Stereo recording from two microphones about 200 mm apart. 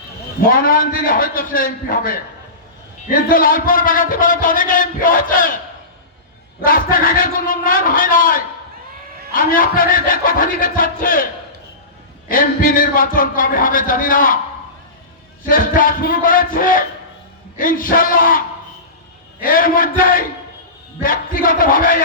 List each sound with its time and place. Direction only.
0.4 s a man's voice: 45° left (ahead or behind)
6.7 s a man's voice: 45° left (ahead or behind)
12.3 s a man's voice: 45° left (ahead or behind)
15.4 s a man's voice: 45° left (ahead or behind)